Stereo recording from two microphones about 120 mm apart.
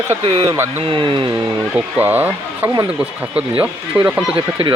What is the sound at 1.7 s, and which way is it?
Speech, 15° right (ahead or behind).